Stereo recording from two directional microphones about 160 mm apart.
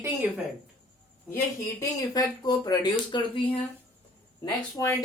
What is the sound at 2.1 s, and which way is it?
A woman's voice, 25° left (ahead or behind).